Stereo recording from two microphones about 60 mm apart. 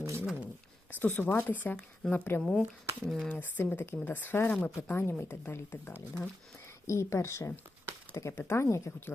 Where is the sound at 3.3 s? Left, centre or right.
Left.